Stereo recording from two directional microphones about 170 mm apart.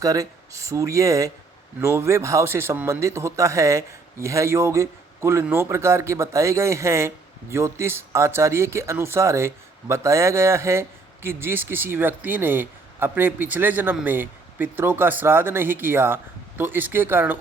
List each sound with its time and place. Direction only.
0.0 s a man's voice: 20° right (ahead or behind)